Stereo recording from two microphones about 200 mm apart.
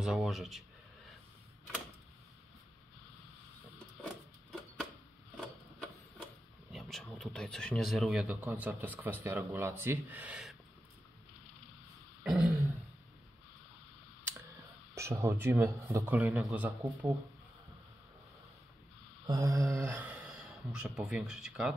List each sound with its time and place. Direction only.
0.0 s speech: centre (ahead or behind)
4.0 s a sound: centre (ahead or behind)
6.7 s a man's voice: centre (ahead or behind)
12.2 s throat clearing: 5° right (ahead or behind)
15.0 s a man's voice: 15° right (ahead or behind)
19.2 s speech: 15° right (ahead or behind)